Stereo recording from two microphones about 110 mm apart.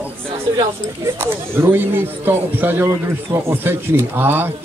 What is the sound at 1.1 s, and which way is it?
Speech, 20° right (ahead or behind).